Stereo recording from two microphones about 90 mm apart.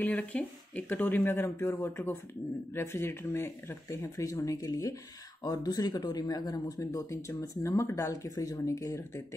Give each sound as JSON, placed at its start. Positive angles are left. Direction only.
{"t": 0.0, "sound": "speech", "side_deg": 15}